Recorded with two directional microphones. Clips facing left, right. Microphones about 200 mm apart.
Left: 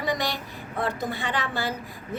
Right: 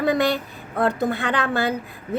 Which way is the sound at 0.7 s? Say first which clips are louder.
Right 7 dB; 60° right (ahead or behind).